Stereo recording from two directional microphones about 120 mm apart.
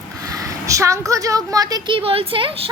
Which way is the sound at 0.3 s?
25° right (ahead or behind).